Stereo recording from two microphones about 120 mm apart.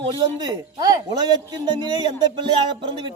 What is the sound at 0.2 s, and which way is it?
A woman's voice, 35° right (ahead or behind).